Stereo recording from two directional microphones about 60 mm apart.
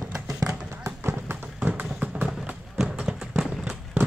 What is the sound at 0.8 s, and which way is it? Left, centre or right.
Run, right.